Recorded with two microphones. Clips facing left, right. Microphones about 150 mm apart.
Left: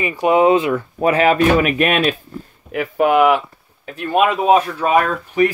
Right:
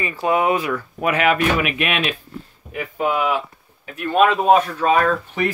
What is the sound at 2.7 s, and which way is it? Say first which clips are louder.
Speech: left 7 dB; 80° left.